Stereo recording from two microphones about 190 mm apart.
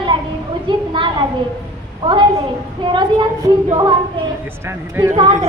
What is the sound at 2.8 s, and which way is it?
Speech, 25° right (ahead or behind).